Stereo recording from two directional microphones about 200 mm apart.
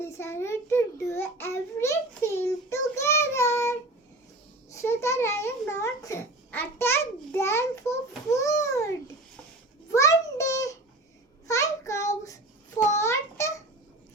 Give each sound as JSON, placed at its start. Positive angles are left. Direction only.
{"t": 0.0, "sound": "child singing", "side_deg": 10}
{"t": 4.7, "sound": "babbling", "side_deg": 15}
{"t": 9.9, "sound": "a sound", "side_deg": 15}
{"t": 11.4, "sound": "child singing", "side_deg": 15}